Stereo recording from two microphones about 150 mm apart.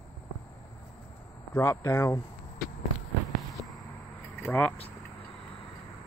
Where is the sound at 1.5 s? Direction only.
20° left (ahead or behind).